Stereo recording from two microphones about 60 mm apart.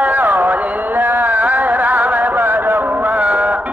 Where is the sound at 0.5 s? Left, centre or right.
Right.